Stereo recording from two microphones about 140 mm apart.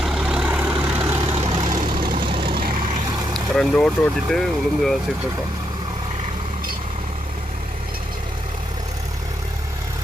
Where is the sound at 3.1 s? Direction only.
30° right (ahead or behind).